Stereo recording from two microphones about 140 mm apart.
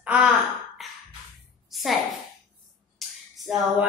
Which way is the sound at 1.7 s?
Centre (ahead or behind).